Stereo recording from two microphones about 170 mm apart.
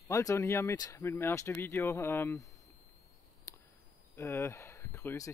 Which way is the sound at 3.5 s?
20° left (ahead or behind).